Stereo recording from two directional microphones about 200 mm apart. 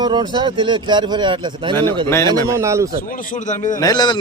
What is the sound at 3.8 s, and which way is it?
Speech, 20° left (ahead or behind).